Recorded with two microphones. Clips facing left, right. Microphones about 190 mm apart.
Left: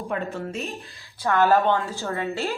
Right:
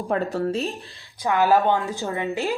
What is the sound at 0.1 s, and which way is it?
Speech, 35° right (ahead or behind).